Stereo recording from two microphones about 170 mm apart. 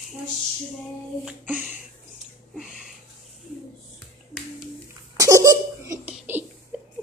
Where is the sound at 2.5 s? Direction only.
Centre (ahead or behind).